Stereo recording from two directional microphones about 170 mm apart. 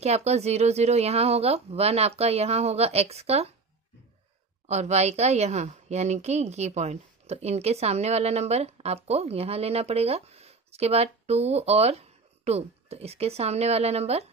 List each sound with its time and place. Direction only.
0.0 s a woman's voice: 40° right (ahead or behind)
4.6 s a woman's voice: 40° right (ahead or behind)